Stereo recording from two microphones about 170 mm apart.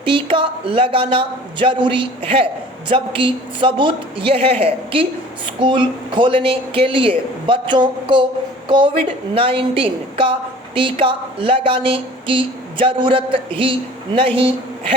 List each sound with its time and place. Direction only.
0.0 s speech: 30° right (ahead or behind)